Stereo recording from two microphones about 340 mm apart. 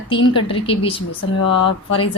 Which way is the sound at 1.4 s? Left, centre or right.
Left.